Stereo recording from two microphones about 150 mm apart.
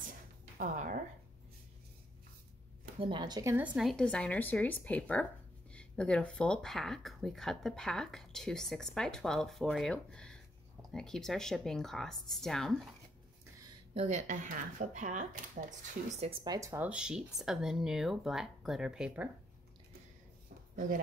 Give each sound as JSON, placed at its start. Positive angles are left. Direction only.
{"t": 0.6, "sound": "speech", "side_deg": -60}
{"t": 3.0, "sound": "speech", "side_deg": -30}
{"t": 3.5, "sound": "speech", "side_deg": -5}
{"t": 13.9, "sound": "speech", "side_deg": -50}
{"t": 16.4, "sound": "speech", "side_deg": -20}